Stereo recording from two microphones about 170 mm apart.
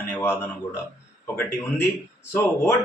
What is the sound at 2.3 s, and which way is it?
Speech, 15° left (ahead or behind).